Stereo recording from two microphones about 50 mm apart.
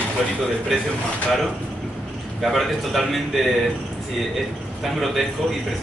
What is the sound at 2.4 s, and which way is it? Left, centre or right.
Speech, centre.